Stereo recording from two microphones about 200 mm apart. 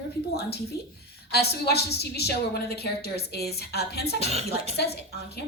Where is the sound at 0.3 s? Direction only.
55° left (ahead or behind).